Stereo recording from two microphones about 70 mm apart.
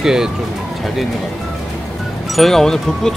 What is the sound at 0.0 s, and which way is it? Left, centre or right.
Speech, centre.